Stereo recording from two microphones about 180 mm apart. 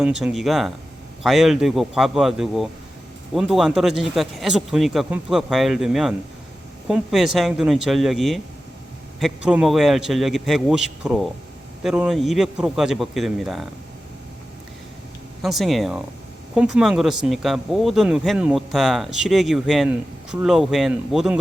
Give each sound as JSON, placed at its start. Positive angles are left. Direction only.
{"t": 0.0, "sound": "speech", "side_deg": -5}
{"t": 15.4, "sound": "speech", "side_deg": 0}